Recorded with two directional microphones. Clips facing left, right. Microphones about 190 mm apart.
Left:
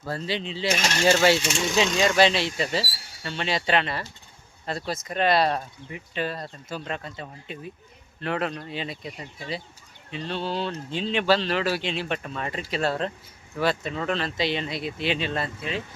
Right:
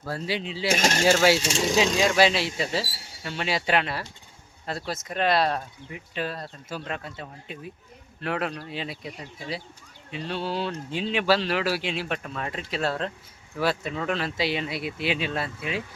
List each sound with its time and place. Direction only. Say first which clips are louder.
0.0 s speech: even; 5° right (ahead or behind)
0.7 s coin: right 3 dB; 45° right (ahead or behind)
1.0 s speech: left 1 dB; 10° right (ahead or behind)
1.4 s speech: right 1 dB; 35° right (ahead or behind)
2.0 s speech: left 1 dB; 5° right (ahead or behind)